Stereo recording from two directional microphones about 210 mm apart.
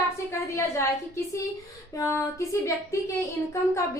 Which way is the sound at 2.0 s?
15° left (ahead or behind).